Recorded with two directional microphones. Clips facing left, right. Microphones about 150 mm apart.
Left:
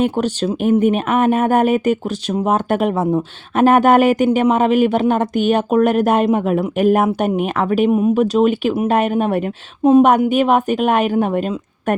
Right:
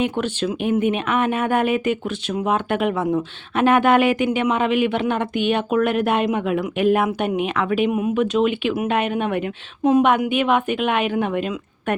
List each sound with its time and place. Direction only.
0.0 s speech: 40° left (ahead or behind)